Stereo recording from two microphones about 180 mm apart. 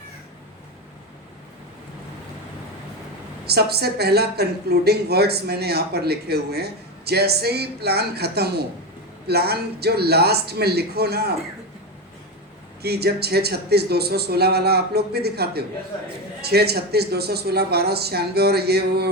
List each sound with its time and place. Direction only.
3.4 s a woman's voice: 60° right (ahead or behind)
12.8 s a woman's voice: 60° right (ahead or behind)